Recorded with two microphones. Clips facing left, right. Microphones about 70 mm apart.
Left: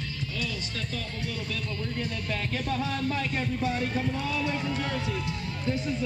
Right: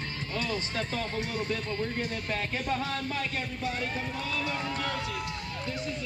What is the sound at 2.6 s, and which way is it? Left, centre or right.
Music, right.